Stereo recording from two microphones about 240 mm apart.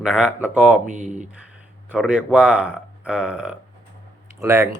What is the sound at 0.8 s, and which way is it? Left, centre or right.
Speech, right.